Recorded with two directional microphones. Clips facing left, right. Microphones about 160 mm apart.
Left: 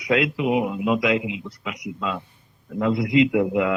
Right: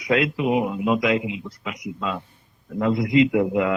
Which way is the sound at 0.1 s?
40° right (ahead or behind).